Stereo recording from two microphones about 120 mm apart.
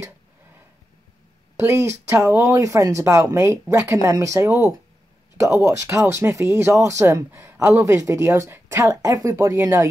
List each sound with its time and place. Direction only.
1.6 s speech: 20° right (ahead or behind)